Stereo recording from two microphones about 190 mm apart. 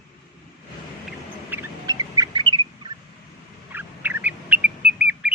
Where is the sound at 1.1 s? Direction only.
10° right (ahead or behind).